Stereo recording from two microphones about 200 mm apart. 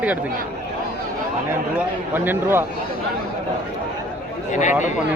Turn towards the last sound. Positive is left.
turn(degrees=40)  # may be behind; listen again after turning